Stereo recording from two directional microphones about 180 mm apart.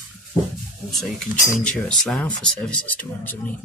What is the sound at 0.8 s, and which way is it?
Speech, centre (ahead or behind).